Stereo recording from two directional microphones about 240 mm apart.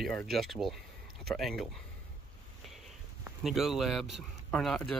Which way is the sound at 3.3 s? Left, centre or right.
Centre.